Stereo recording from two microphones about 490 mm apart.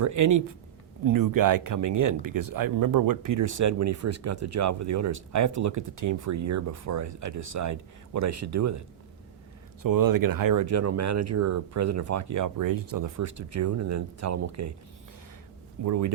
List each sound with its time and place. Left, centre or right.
0.0 s speech: right
9.8 s speech: right
15.8 s speech: right